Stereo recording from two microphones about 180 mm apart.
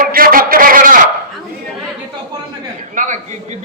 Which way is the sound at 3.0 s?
45° right (ahead or behind).